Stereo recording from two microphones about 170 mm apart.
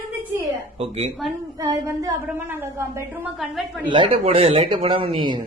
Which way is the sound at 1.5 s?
20° right (ahead or behind).